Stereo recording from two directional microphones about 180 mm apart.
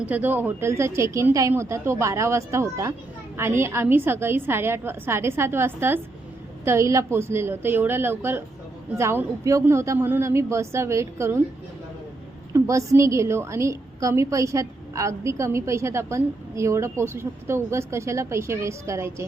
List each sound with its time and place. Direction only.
0.0 s a woman's voice: 10° right (ahead or behind)
12.5 s a woman's voice: 15° right (ahead or behind)